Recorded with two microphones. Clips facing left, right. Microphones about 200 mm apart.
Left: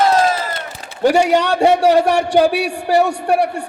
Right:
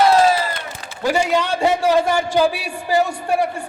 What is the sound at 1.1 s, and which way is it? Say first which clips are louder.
A man's voice: left 2 dB; 70° left (ahead or behind).